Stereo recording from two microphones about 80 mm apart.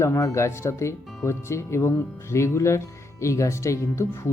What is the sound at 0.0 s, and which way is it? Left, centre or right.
Speech, left.